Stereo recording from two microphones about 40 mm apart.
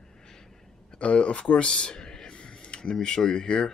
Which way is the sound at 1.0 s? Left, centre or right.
Left.